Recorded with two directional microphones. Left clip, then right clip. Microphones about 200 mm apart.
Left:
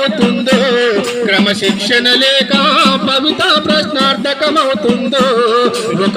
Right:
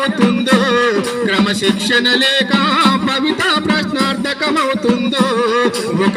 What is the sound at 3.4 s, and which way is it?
Music, 55° right (ahead or behind).